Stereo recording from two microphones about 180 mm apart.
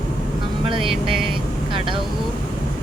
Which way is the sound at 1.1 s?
30° right (ahead or behind).